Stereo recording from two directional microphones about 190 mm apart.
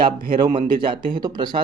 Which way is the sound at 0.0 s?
25° right (ahead or behind).